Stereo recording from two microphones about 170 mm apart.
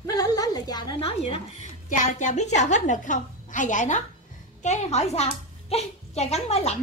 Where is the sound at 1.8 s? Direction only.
45° left (ahead or behind).